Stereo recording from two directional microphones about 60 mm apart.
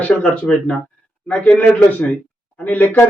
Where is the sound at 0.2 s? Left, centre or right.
Centre.